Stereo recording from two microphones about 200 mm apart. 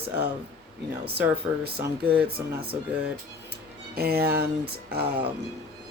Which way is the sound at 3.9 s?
50° right (ahead or behind).